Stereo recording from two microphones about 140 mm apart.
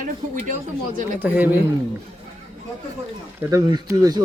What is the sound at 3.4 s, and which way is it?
Speech, 20° right (ahead or behind).